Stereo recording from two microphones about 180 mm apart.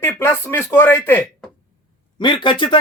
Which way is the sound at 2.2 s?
25° left (ahead or behind).